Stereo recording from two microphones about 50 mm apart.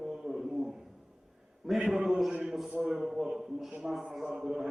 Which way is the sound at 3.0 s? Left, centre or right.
Centre.